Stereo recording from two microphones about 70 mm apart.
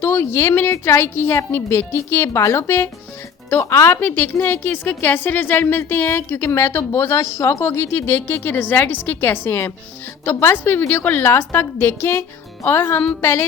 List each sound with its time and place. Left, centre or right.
0.0 s a woman's voice: left